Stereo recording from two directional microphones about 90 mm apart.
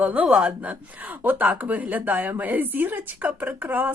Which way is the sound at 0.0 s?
15° right (ahead or behind).